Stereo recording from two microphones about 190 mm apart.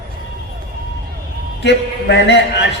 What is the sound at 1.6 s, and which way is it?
Speech, 65° left (ahead or behind).